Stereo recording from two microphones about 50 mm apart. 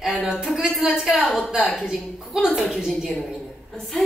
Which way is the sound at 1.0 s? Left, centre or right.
Centre.